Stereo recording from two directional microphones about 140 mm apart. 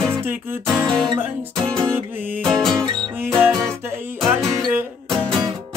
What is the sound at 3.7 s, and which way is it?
Music, 15° right (ahead or behind).